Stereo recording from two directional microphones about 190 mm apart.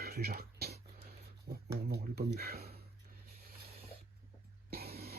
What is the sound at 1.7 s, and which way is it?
Speech, 55° right (ahead or behind).